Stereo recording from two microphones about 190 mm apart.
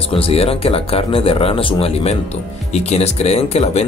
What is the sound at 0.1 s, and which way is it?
Speech, 30° left (ahead or behind).